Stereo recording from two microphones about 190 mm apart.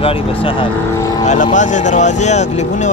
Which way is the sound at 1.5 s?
40° left (ahead or behind).